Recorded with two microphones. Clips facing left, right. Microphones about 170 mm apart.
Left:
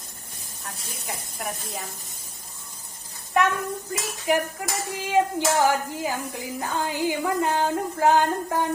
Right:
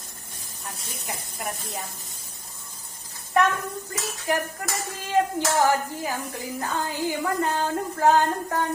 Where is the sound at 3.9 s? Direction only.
10° left (ahead or behind).